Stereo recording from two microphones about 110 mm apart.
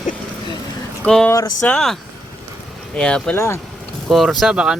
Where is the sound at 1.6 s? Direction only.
5° left (ahead or behind).